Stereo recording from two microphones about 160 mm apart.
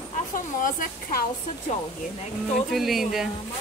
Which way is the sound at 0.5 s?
55° left (ahead or behind).